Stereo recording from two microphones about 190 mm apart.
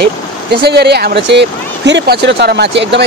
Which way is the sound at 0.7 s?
60° right (ahead or behind).